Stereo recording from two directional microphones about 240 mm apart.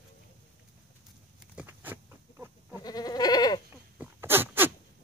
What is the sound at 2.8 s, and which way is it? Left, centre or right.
Goat, centre.